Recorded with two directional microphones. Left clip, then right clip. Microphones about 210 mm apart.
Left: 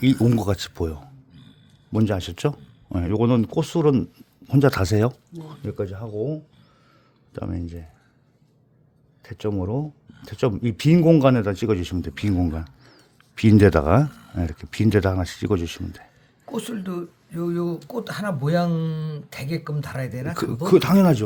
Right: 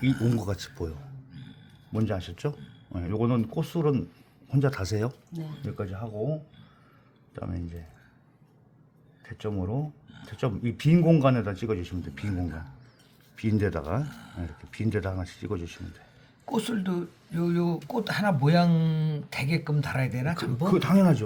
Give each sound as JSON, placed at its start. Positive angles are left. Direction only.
{"t": 0.3, "sound": "speech", "side_deg": 45}
{"t": 7.3, "sound": "speech", "side_deg": 50}
{"t": 9.2, "sound": "speech", "side_deg": 50}
{"t": 12.5, "sound": "a sound", "side_deg": 50}
{"t": 14.1, "sound": "speech", "side_deg": 0}
{"t": 14.3, "sound": "speech", "side_deg": 50}
{"t": 16.5, "sound": "speech", "side_deg": 5}
{"t": 20.7, "sound": "speech", "side_deg": 55}